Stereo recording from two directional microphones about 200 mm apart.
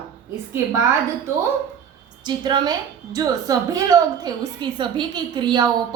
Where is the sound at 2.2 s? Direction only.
20° right (ahead or behind).